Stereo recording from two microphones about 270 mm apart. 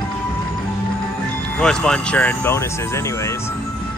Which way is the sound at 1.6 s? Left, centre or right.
Centre.